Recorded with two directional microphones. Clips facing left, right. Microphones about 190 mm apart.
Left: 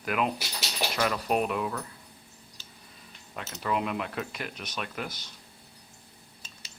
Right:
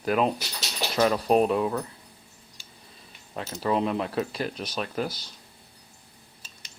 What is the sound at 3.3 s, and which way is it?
Speech, 30° right (ahead or behind).